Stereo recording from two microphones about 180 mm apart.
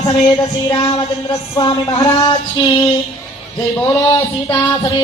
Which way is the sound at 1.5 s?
25° left (ahead or behind).